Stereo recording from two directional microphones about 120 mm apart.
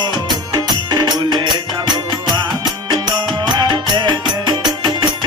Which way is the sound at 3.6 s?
35° right (ahead or behind).